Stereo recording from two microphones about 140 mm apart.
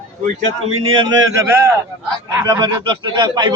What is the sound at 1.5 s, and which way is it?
A man's voice, 20° right (ahead or behind).